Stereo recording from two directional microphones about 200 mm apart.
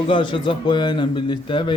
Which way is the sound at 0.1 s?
25° left (ahead or behind).